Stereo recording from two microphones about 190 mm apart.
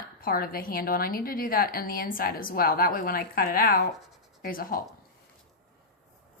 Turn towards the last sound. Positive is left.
turn(degrees=50)  # may be behind; listen again after turning